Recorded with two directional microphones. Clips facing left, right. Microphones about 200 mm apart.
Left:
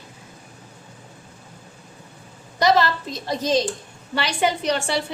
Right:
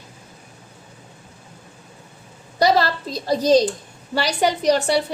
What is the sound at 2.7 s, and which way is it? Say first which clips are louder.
A woman's voice: even; 35° right (ahead or behind).